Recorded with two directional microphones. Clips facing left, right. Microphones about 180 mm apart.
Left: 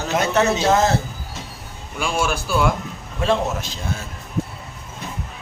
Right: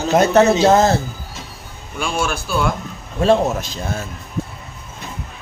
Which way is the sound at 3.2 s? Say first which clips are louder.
Right 5 dB; 40° right (ahead or behind).